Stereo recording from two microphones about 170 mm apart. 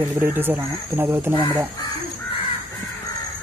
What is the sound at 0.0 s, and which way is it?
Speech, 15° right (ahead or behind).